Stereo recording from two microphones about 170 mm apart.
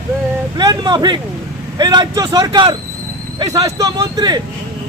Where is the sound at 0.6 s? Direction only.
25° right (ahead or behind).